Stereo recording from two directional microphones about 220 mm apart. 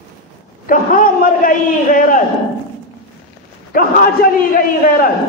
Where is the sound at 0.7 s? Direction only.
40° left (ahead or behind).